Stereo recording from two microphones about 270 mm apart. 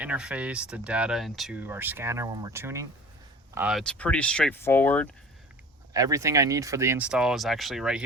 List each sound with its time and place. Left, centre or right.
0.0 s speech: centre
5.9 s speech: centre